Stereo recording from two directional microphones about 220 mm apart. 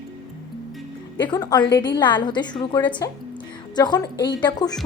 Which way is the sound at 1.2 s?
15° left (ahead or behind).